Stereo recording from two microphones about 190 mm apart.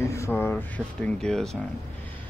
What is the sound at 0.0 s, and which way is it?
Speech, 15° left (ahead or behind).